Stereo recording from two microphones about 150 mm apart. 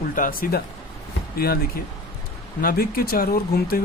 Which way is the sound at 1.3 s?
90° left.